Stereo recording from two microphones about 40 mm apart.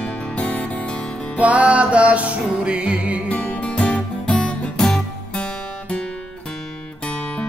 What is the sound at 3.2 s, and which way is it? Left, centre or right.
Music, left.